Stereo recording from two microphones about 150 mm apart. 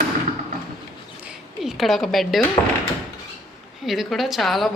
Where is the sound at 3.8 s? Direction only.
Centre (ahead or behind).